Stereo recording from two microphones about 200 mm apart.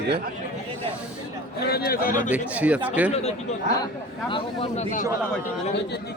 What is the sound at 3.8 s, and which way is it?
A man's voice, 25° left (ahead or behind).